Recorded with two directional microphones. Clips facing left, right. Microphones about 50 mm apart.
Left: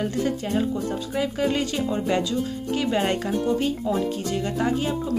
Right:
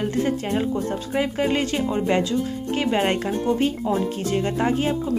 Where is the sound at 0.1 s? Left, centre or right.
Right.